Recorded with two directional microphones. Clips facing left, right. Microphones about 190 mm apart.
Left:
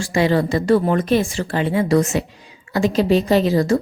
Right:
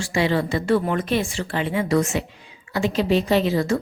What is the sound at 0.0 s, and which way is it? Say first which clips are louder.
A woman's voice: left 4 dB; 40° left (ahead or behind).